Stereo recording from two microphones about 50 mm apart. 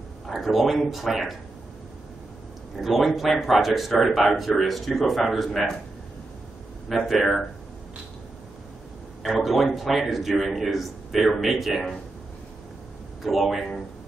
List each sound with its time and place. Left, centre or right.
0.3 s a man's voice: centre
2.8 s a man's voice: centre
7.1 s a man's voice: centre
9.3 s a man's voice: centre
13.2 s a man's voice: centre